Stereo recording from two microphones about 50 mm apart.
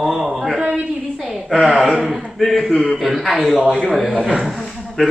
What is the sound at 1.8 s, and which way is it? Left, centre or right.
A man's voice, centre.